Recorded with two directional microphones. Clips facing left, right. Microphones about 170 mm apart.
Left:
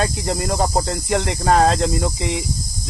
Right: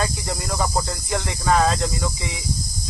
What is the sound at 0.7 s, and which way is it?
Snake, 50° left (ahead or behind).